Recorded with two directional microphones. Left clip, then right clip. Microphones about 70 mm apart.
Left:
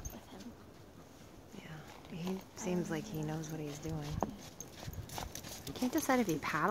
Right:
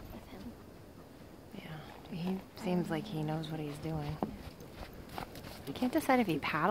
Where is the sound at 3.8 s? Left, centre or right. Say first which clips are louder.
Right 5 dB; right.